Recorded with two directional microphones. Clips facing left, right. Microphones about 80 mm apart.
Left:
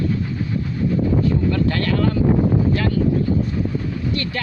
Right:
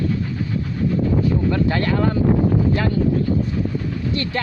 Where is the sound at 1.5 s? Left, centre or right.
Right.